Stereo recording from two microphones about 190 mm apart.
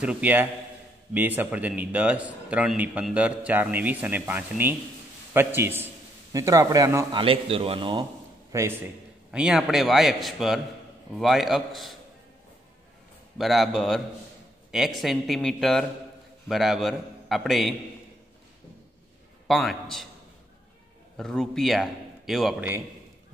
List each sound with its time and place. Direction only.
0.0 s a man's voice: 5° right (ahead or behind)
7.2 s a man's voice: 30° right (ahead or behind)
8.5 s a man's voice: 15° right (ahead or behind)
9.3 s a man's voice: 5° right (ahead or behind)
13.4 s a man's voice: centre (ahead or behind)
19.4 s a man's voice: centre (ahead or behind)
21.2 s a man's voice: centre (ahead or behind)